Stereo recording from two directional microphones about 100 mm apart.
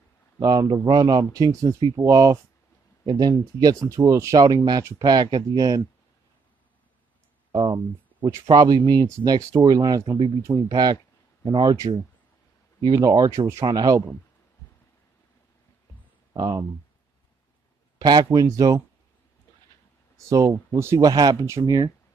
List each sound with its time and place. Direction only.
0.4 s speech: 40° right (ahead or behind)
7.5 s speech: 50° right (ahead or behind)
12.8 s speech: 45° right (ahead or behind)
13.7 s speech: 40° right (ahead or behind)
16.3 s speech: 40° right (ahead or behind)
17.9 s speech: 40° right (ahead or behind)
20.2 s speech: 35° right (ahead or behind)
21.1 s speech: 40° right (ahead or behind)